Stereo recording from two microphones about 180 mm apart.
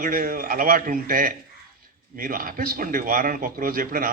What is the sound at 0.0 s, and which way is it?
A man's voice, 50° right (ahead or behind).